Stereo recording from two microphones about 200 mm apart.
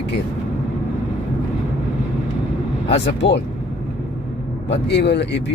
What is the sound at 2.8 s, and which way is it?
Speech, 60° left (ahead or behind).